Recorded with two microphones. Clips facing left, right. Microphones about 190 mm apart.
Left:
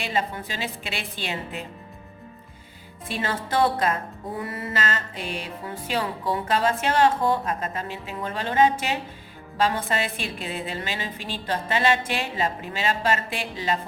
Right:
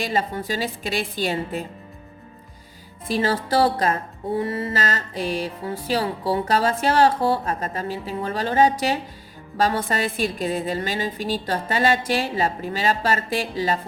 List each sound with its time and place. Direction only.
0.0 s music: 40° right (ahead or behind)
3.1 s music: 35° right (ahead or behind)